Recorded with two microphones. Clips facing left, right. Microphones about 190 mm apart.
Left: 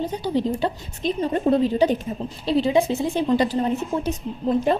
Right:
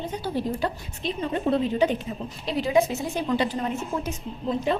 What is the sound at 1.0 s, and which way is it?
A woman's voice, 40° left (ahead or behind).